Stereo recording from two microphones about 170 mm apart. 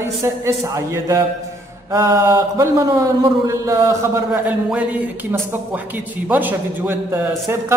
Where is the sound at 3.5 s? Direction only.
20° right (ahead or behind).